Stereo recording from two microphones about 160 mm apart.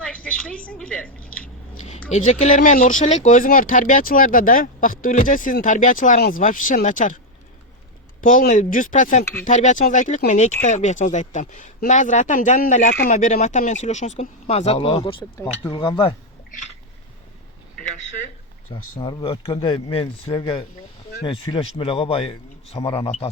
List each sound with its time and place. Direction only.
0.0 s a sound: 5° left (ahead or behind)
1.8 s speech: 45° left (ahead or behind)
8.2 s speech: 55° left (ahead or behind); by 16.1 s 30° left (ahead or behind)
18.7 s speech: 30° left (ahead or behind)